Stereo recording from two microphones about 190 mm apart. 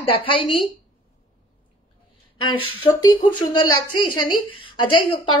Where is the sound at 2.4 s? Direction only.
25° left (ahead or behind).